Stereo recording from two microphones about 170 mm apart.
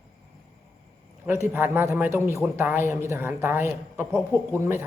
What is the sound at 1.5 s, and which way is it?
Speech, 10° right (ahead or behind).